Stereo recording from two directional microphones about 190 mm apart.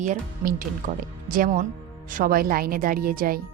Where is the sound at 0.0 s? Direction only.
45° right (ahead or behind).